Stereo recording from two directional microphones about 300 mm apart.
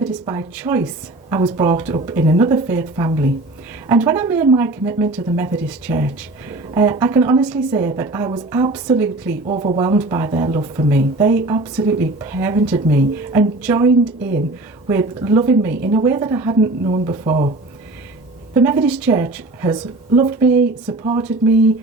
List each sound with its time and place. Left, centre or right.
0.0 s a woman's voice: centre
9.5 s a woman's voice: centre
14.2 s speech: right
14.8 s a woman's voice: centre
18.5 s a woman's voice: centre